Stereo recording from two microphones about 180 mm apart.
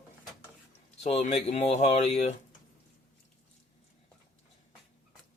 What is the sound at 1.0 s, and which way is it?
Speech, 40° left (ahead or behind).